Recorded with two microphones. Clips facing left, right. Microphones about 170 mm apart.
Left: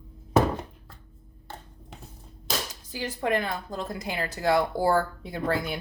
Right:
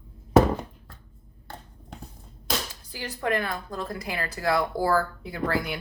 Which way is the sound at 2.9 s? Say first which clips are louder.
Left 1 dB; 20° left (ahead or behind).